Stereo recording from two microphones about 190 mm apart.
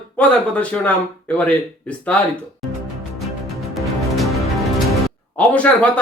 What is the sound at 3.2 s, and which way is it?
Music, centre (ahead or behind).